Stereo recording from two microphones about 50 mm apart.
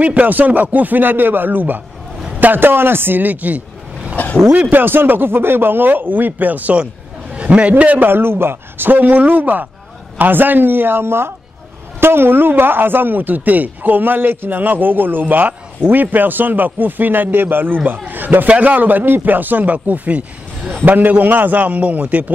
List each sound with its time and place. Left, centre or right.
0.0 s speech: right
4.2 s vehicle: left
4.6 s speech: right
7.3 s a sound: right
7.8 s speech: right
8.1 s speech: right